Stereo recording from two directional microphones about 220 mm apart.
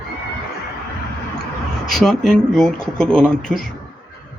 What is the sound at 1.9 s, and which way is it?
Speech, centre (ahead or behind).